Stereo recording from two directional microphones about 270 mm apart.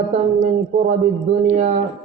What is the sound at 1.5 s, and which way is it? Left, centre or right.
Speech, right.